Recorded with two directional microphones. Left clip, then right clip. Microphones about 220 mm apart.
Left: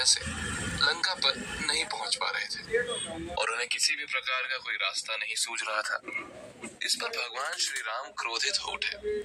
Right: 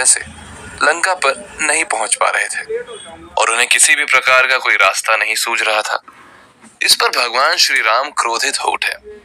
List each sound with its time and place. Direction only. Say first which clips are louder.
0.8 s speech: right 14 dB; 45° right (ahead or behind)